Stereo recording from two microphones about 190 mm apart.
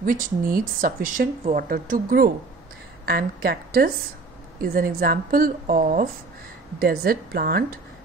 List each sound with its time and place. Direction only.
0.0 s speech: 45° right (ahead or behind)